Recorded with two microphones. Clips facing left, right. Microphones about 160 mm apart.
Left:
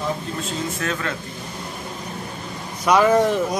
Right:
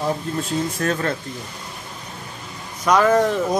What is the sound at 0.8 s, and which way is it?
Speech, 40° right (ahead or behind).